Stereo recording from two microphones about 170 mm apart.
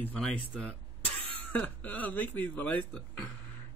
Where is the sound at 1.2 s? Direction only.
35° right (ahead or behind).